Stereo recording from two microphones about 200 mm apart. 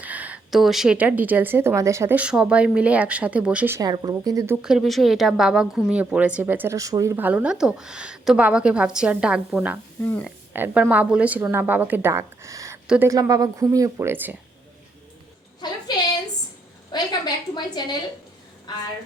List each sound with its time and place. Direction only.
0.0 s a woman's voice: 10° right (ahead or behind)
4.6 s speech: centre (ahead or behind)
10.0 s speech: 10° left (ahead or behind)
10.2 s a woman's voice: 10° right (ahead or behind)
15.6 s a sound: 20° left (ahead or behind)
16.9 s a sound: 20° left (ahead or behind)